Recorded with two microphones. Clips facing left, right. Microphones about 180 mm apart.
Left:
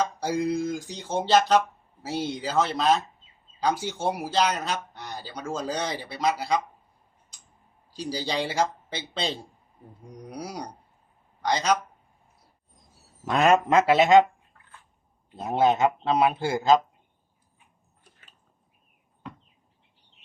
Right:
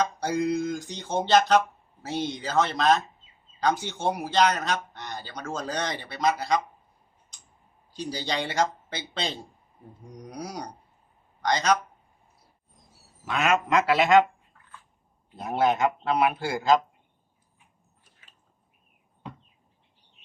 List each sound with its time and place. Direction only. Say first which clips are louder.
0.0 s speech: even; 5° left (ahead or behind)
8.3 s speech: even; 5° left (ahead or behind)
13.2 s speech: left 5 dB; 35° left (ahead or behind); by 14.3 s 20° left (ahead or behind)
15.4 s speech: left 2 dB; 25° left (ahead or behind)